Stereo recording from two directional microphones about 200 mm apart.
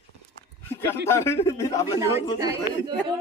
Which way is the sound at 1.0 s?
15° left (ahead or behind).